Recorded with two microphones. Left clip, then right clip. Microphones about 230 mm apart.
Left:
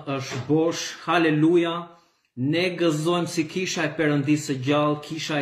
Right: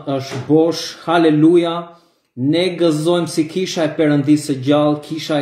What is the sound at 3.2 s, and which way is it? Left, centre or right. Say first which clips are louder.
Speech: right 7 dB; centre.